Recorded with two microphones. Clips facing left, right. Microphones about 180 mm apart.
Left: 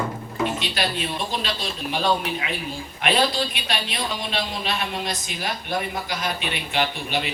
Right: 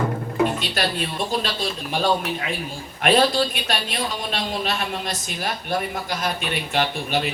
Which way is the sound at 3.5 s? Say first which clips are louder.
Right 2 dB; 45° right (ahead or behind).